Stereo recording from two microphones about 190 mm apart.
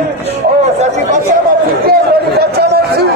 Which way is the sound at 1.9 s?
55° right (ahead or behind).